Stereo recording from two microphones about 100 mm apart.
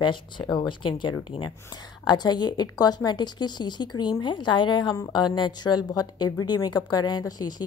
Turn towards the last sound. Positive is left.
turn(degrees=40)  # may be behind; listen again after turning